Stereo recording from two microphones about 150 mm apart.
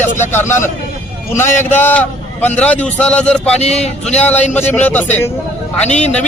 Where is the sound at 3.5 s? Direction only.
45° left (ahead or behind).